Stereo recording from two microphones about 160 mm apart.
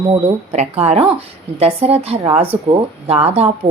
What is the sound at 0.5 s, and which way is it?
A woman's voice, 45° right (ahead or behind).